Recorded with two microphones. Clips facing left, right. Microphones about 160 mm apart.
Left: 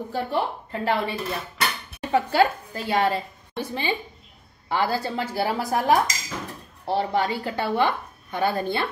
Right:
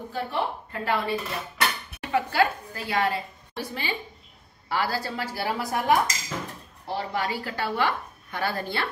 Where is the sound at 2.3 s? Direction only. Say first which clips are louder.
Left 3 dB; 25° left (ahead or behind).